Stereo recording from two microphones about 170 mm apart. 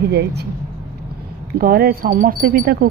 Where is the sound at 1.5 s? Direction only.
60° right (ahead or behind).